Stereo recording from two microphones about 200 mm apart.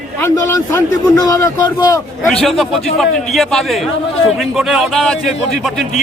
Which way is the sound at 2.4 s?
Centre (ahead or behind).